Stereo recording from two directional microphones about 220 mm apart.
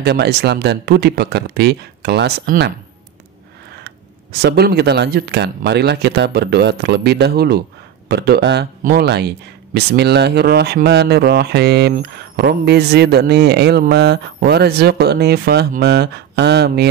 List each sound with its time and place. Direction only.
0.0 s speech: 50° right (ahead or behind)
3.8 s speech: 50° right (ahead or behind)